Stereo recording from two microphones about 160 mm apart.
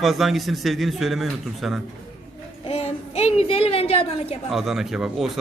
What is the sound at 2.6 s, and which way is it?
A child's voice, 40° left (ahead or behind).